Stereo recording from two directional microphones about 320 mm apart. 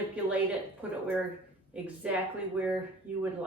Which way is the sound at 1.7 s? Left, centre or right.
Centre.